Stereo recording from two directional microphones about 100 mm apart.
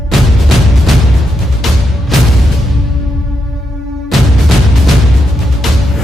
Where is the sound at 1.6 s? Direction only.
Centre (ahead or behind).